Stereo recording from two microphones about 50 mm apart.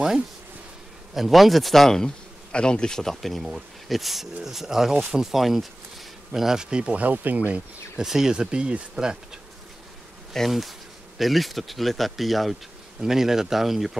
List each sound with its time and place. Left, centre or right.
1.1 s speech: centre; by 7.5 s right
8.0 s speech: centre
10.3 s bee: centre
11.1 s speech: centre